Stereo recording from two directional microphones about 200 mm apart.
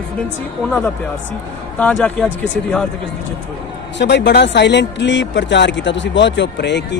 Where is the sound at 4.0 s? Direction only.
60° left (ahead or behind).